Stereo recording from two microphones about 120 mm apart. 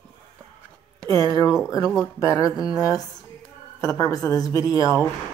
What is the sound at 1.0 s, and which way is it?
Speech, 30° left (ahead or behind).